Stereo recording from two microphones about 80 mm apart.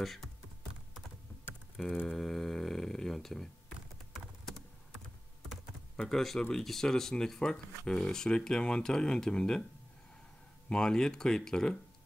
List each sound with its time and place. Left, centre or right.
0.0 s speech: centre
2.0 s a sound: centre
5.9 s speech: centre
10.7 s speech: centre